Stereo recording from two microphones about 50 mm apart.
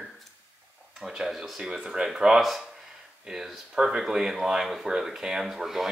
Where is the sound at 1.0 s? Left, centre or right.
Centre.